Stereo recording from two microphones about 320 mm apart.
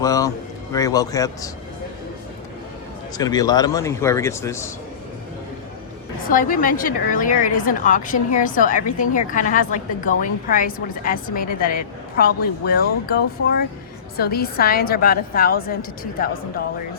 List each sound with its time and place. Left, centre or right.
0.0 s a man's voice: centre
3.2 s speech: centre
6.2 s a woman's voice: left